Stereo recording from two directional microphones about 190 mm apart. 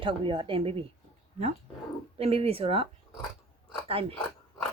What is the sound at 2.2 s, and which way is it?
Speech, 30° right (ahead or behind).